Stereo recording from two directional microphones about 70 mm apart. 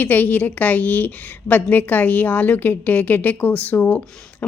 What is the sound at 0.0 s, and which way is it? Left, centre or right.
A woman's voice, left.